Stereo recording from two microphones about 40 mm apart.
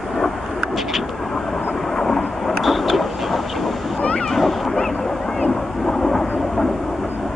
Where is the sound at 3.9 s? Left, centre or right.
Left.